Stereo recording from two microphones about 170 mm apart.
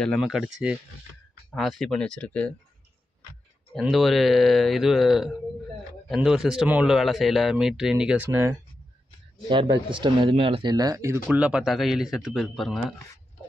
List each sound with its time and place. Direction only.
0.0 s a man's voice: centre (ahead or behind)
1.5 s a man's voice: centre (ahead or behind)
3.8 s a man's voice: centre (ahead or behind)
9.5 s speech: 30° right (ahead or behind)
11.2 s a man's voice: 5° right (ahead or behind)